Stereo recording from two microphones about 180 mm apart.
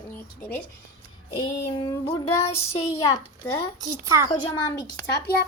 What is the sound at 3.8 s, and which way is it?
Speech, 15° right (ahead or behind).